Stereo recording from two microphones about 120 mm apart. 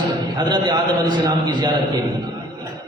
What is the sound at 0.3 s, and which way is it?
A man's voice, 35° right (ahead or behind).